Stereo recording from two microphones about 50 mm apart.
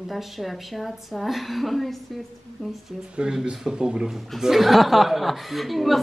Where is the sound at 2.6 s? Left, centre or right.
Centre.